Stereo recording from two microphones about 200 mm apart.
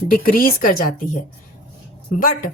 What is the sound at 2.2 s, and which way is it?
Speech, 45° left (ahead or behind).